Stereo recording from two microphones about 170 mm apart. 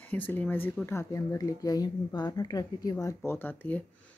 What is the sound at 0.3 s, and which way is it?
Speech, 10° left (ahead or behind).